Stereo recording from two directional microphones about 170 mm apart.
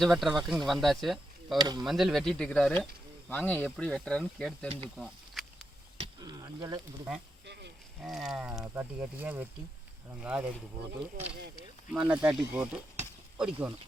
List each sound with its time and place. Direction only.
0.0 s speech: centre (ahead or behind)
1.5 s speech: 25° right (ahead or behind)
1.8 s speech: centre (ahead or behind)
4.9 s a sound: centre (ahead or behind)
6.1 s a sound: 20° right (ahead or behind)
7.4 s a sound: 85° right
8.0 s speech: centre (ahead or behind)
8.6 s speech: 15° right (ahead or behind)
11.9 s speech: 5° right (ahead or behind)